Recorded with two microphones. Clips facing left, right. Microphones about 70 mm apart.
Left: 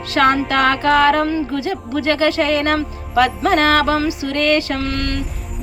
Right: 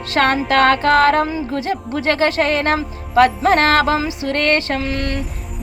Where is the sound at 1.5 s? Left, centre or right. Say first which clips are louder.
Even; right.